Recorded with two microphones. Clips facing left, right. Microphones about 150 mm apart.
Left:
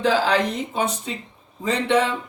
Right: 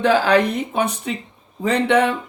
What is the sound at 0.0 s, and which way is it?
Speech, 60° right (ahead or behind).